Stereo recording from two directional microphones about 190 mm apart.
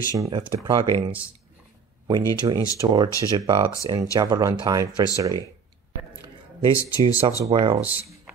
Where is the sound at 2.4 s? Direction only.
20° right (ahead or behind).